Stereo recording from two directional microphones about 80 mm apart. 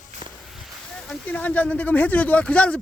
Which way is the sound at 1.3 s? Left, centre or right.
Centre.